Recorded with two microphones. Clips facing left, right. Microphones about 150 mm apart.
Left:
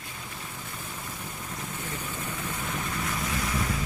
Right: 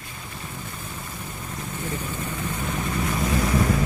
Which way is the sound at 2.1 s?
Centre (ahead or behind).